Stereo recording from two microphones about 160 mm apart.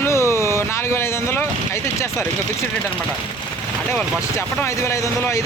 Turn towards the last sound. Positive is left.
turn(degrees=20)  # may be behind; listen again after turning